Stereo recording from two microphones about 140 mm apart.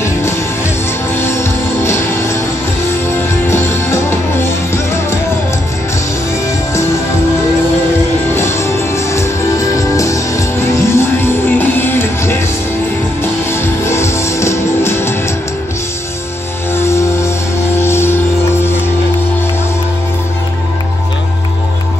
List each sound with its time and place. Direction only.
1.1 s music: 20° left (ahead or behind)
8.4 s music: 20° left (ahead or behind)
16.7 s music: 20° left (ahead or behind)